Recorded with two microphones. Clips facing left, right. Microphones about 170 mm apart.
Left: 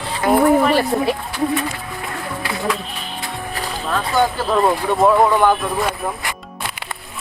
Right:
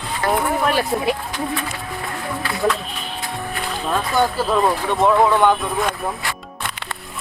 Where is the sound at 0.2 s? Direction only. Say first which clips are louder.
Left 4 dB; 10° left (ahead or behind).